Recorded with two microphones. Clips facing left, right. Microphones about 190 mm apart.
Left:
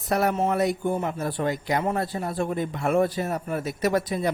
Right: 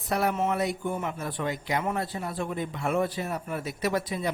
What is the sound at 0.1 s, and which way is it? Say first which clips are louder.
A man's voice: left 3 dB; 45° left (ahead or behind).